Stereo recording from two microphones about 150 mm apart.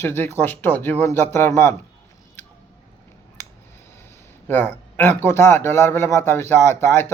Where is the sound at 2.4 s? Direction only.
15° left (ahead or behind).